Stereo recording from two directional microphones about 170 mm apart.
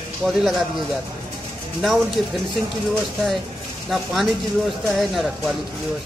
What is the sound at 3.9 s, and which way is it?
A man's voice, centre (ahead or behind).